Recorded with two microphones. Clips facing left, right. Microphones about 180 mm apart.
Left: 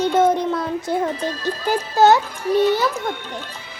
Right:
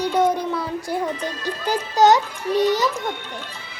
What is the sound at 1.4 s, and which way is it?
A child's voice, 15° right (ahead or behind).